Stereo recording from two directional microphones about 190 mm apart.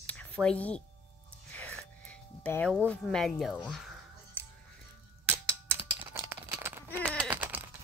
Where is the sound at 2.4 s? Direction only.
5° left (ahead or behind).